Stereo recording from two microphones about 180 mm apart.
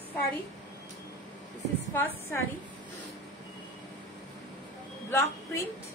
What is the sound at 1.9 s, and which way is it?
Speech, 15° left (ahead or behind).